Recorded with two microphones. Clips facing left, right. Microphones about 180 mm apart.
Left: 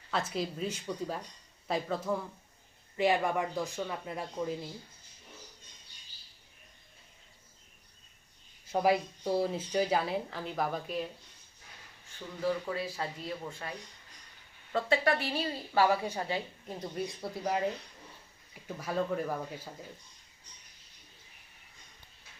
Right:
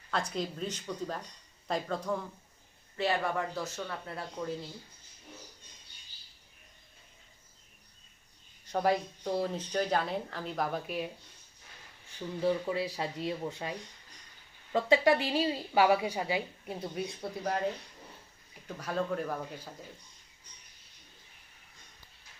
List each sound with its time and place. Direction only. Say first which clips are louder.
0.1 s speech: even; 5° left (ahead or behind)
3.0 s speech: left 3 dB; 15° left (ahead or behind)
8.6 s speech: left 1 dB; 10° left (ahead or behind)
12.4 s a woman's voice: right 2 dB; 20° right (ahead or behind); by 17.7 s 5° left (ahead or behind)
18.7 s speech: left 1 dB; 10° left (ahead or behind)